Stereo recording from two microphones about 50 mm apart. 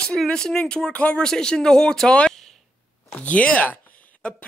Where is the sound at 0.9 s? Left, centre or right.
Left.